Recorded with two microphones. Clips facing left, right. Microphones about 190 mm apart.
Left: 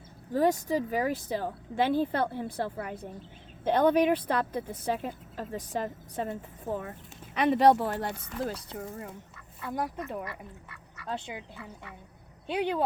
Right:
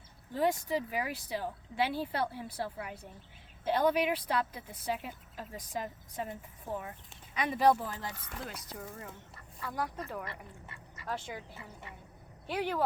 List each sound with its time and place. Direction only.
0.3 s speech: 40° left (ahead or behind)
7.3 s speech: 65° left (ahead or behind)
8.1 s speech: 35° left (ahead or behind)
10.2 s speech: 25° right (ahead or behind)
11.0 s speech: 20° left (ahead or behind)
12.5 s speech: 20° left (ahead or behind)